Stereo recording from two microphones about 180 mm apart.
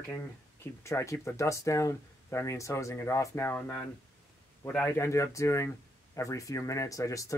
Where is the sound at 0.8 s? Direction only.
15° left (ahead or behind).